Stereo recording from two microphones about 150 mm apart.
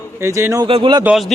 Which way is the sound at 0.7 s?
35° right (ahead or behind).